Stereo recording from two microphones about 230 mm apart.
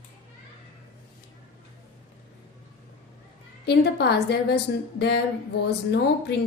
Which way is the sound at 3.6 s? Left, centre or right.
Left.